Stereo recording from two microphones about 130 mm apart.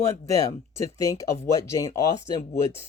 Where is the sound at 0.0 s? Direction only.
25° left (ahead or behind).